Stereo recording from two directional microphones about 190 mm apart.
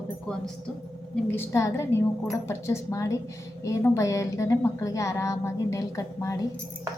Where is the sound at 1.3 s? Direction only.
15° left (ahead or behind).